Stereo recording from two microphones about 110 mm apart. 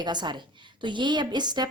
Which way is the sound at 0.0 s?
40° right (ahead or behind).